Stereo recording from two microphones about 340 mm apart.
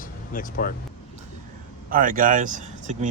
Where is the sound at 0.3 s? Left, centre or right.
Left.